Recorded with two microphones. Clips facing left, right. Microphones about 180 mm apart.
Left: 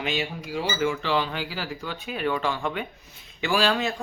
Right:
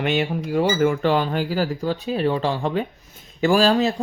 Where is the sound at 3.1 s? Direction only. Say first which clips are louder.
Right 8 dB; 45° right (ahead or behind).